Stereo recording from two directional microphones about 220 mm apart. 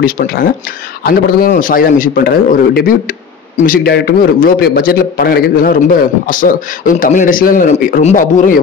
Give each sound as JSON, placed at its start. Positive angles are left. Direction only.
{"t": 0.0, "sound": "a man's voice", "side_deg": 40}